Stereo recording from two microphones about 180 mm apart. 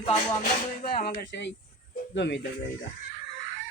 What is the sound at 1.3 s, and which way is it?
Speech, 75° left (ahead or behind).